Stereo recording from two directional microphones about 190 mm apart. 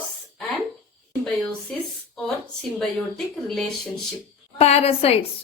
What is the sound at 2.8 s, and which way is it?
Speech, centre (ahead or behind).